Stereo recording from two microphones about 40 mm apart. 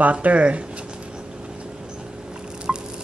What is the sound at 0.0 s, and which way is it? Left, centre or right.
Speech, right.